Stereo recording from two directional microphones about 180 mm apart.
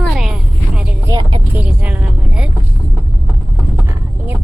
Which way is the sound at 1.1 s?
25° right (ahead or behind).